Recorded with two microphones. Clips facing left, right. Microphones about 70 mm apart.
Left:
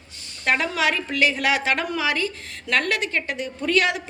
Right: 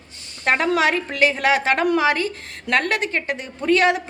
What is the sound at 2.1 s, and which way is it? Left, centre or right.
A woman's voice, right.